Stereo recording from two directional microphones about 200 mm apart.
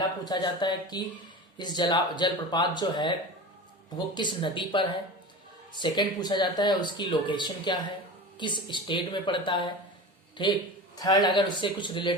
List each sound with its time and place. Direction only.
0.3 s speech: 20° left (ahead or behind)